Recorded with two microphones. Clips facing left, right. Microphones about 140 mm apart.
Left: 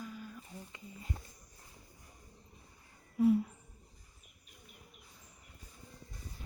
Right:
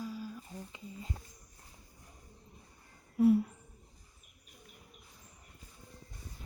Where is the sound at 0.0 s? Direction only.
30° right (ahead or behind).